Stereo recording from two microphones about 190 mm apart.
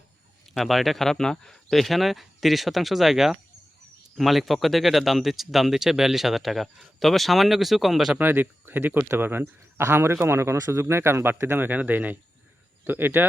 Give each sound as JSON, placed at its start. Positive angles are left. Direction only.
{"t": 0.5, "sound": "speech", "side_deg": 0}